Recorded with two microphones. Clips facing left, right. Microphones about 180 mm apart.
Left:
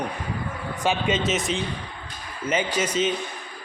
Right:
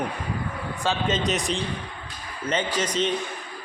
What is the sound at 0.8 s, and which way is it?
A man's voice, 5° left (ahead or behind).